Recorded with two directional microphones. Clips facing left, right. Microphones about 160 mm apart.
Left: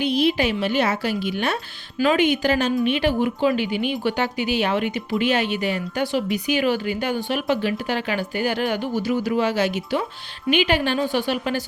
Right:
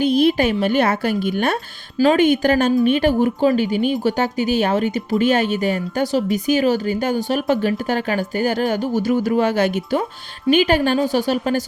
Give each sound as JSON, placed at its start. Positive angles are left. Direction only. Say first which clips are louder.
{"t": 0.0, "sound": "a woman's voice", "louder": "right 4 dB", "side_deg": -50}